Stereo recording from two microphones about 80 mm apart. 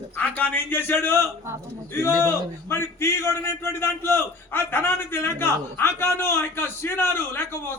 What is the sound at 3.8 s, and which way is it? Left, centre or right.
A man's voice, left.